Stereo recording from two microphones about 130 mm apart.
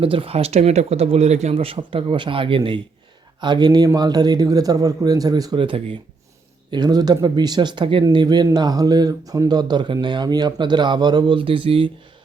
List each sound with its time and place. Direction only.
0.0 s speech: 45° right (ahead or behind)